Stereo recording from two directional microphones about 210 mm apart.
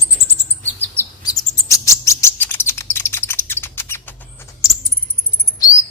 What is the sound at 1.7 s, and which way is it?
Bird, 15° left (ahead or behind).